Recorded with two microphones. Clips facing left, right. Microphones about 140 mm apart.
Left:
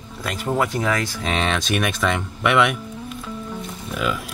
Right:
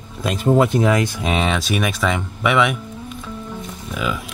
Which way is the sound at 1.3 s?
5° right (ahead or behind).